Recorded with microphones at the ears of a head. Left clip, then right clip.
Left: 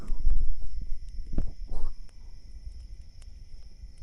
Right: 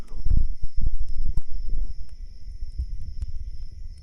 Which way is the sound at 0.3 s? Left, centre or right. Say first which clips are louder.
Right 10 dB; right.